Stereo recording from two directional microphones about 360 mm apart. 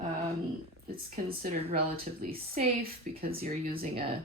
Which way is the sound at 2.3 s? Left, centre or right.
Right.